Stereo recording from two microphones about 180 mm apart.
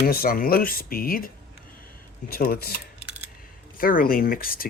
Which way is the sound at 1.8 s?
55° left (ahead or behind).